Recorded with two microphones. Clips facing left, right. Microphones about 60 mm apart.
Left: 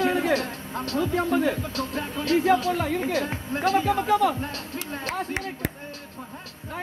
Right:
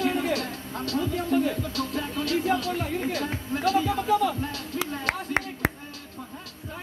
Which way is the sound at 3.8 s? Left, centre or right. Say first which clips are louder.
Left 2 dB; left.